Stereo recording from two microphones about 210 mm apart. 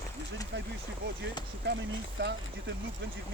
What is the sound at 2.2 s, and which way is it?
Speech, 55° right (ahead or behind).